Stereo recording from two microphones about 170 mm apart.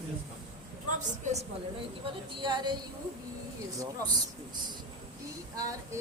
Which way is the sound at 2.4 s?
25° right (ahead or behind).